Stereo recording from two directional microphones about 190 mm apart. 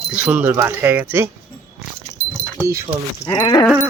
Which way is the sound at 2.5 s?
15° right (ahead or behind).